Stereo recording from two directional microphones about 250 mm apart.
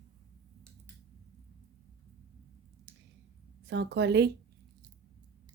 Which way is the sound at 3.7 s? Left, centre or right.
Right.